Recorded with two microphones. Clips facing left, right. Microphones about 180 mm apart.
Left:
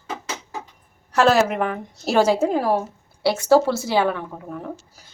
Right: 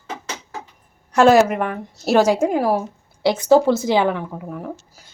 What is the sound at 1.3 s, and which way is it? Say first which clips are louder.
A woman's voice: right 5 dB; 10° right (ahead or behind).